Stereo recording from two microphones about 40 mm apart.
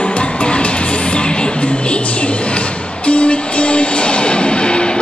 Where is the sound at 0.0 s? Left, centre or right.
Left.